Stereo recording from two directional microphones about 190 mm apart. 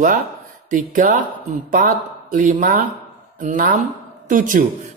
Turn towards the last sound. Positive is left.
turn(degrees=-45)  # may be behind; listen again after turning